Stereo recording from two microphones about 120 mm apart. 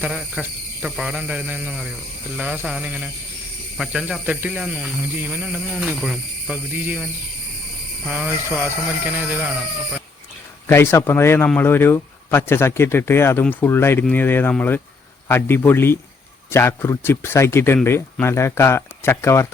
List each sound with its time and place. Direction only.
0.0 s speech: 10° right (ahead or behind)
6.7 s speech: 15° right (ahead or behind)
8.1 s speech: 15° right (ahead or behind)
10.7 s speech: 20° left (ahead or behind)